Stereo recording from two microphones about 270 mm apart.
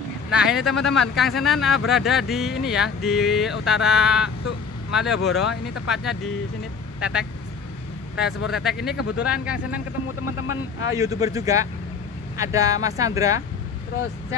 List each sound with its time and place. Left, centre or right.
0.3 s speech: centre
7.0 s speech: centre
8.5 s speech: centre
10.0 s speech: left
11.0 s speech: centre